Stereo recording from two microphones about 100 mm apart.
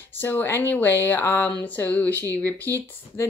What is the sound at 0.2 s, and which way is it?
Speech, 20° left (ahead or behind).